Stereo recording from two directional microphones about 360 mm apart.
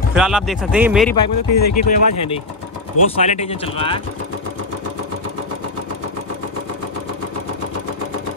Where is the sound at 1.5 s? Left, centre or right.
Left.